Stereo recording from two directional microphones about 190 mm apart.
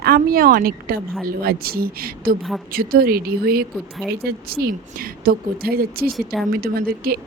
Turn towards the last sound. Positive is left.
turn(degrees=-50)  # may be behind; listen again after turning